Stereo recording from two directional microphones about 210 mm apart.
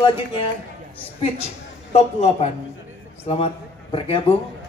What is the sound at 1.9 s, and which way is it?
A man's voice, 30° left (ahead or behind).